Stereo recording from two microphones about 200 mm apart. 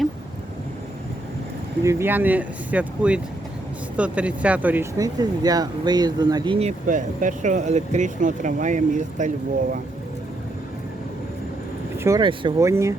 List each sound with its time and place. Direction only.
1.8 s speech: 15° right (ahead or behind); by 9.3 s 40° right (ahead or behind)
11.9 s speech: 15° right (ahead or behind)